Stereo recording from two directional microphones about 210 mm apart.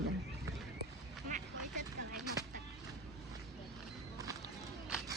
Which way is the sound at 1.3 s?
35° right (ahead or behind).